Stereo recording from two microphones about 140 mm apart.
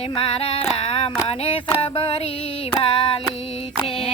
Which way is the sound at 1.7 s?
40° left (ahead or behind).